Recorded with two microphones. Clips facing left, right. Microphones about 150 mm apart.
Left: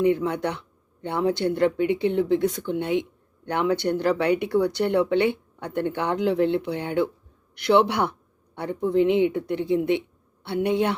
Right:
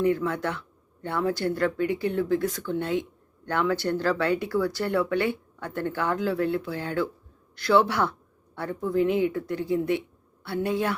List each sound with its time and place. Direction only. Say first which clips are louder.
0.0 s speech: left 3 dB; 20° left (ahead or behind)